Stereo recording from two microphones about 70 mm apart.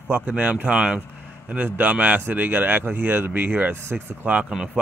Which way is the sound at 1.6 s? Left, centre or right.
Right.